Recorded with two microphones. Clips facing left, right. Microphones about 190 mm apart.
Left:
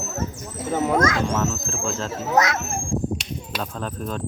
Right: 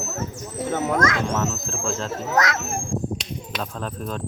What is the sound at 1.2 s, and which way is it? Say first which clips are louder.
Speech: left 1 dB; centre (ahead or behind).